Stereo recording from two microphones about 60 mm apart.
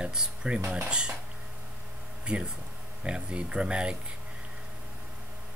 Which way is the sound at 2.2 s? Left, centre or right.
Centre.